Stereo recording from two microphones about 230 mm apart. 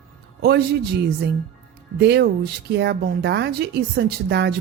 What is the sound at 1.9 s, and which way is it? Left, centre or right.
A woman's voice, right.